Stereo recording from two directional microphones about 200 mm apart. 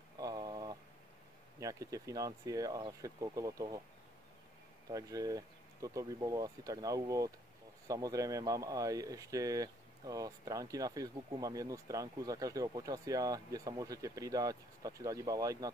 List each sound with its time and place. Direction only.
0.2 s a sound: 20° right (ahead or behind)
1.6 s speech: 15° right (ahead or behind)
4.8 s speech: 15° right (ahead or behind)